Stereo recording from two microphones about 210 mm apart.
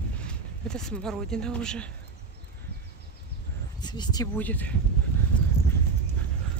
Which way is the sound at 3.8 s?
20° left (ahead or behind).